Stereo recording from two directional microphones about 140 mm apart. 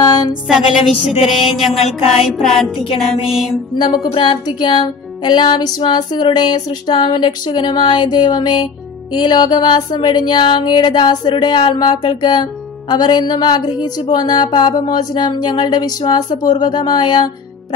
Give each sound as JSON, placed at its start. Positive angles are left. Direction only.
{"t": 0.0, "sound": "a woman's voice", "side_deg": 30}
{"t": 1.2, "sound": "music", "side_deg": 0}
{"t": 2.8, "sound": "music", "side_deg": 40}